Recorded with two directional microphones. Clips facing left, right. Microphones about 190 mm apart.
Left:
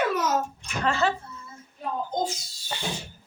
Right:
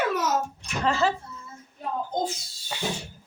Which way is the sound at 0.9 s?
Centre (ahead or behind).